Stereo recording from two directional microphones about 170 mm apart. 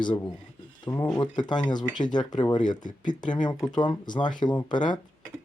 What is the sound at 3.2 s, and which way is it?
Dishes, 25° left (ahead or behind).